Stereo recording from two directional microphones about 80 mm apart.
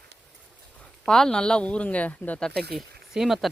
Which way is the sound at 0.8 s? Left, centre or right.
Centre.